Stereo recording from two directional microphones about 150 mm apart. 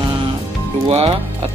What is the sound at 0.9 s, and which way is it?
Music, 45° right (ahead or behind).